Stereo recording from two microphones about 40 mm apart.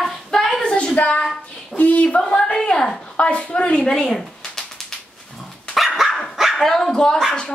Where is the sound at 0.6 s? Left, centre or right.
Left.